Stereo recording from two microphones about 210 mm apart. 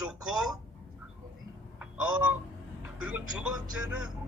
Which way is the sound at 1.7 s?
5° right (ahead or behind).